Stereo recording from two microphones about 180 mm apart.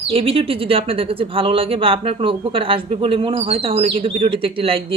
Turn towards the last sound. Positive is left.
turn(degrees=-30)  # may be behind; listen again after turning